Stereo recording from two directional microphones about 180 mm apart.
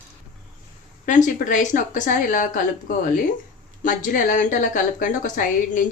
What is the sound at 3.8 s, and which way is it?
A woman's voice, 45° left (ahead or behind).